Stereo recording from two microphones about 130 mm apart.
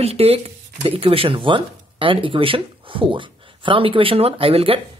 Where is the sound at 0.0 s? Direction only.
50° right (ahead or behind).